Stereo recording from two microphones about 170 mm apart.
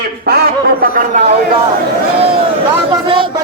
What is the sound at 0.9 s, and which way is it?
Speech, 45° right (ahead or behind).